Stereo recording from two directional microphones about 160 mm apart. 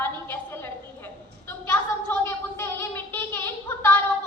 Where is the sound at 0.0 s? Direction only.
15° left (ahead or behind).